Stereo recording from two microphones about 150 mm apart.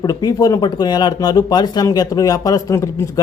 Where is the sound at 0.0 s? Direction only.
25° left (ahead or behind).